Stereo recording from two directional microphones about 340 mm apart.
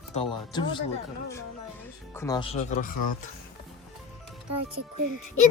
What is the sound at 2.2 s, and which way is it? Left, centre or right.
Speech, centre.